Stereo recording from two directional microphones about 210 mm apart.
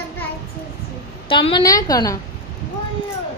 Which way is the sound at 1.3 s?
25° left (ahead or behind).